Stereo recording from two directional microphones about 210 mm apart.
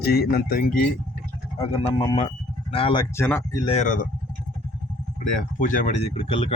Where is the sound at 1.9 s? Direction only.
30° left (ahead or behind); by 3.6 s 10° left (ahead or behind).